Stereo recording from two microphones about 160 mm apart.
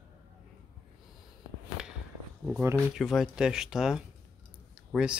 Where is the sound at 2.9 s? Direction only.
Centre (ahead or behind).